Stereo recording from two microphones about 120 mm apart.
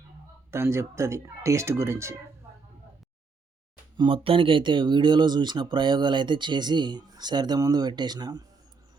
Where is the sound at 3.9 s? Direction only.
45° right (ahead or behind).